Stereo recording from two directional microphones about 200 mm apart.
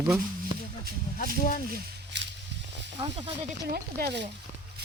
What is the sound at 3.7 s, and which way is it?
Speech, 50° right (ahead or behind).